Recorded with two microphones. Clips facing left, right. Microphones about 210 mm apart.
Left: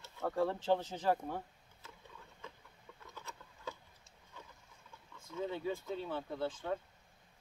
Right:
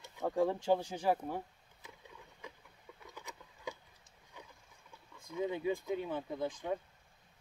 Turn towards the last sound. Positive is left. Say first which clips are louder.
# right 1 dB
turn(degrees=-15)  # may be behind; listen again after turning